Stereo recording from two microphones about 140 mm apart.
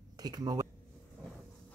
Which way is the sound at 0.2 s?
30° right (ahead or behind).